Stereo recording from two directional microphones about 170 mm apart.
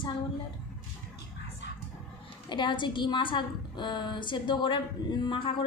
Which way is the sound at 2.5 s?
25° left (ahead or behind).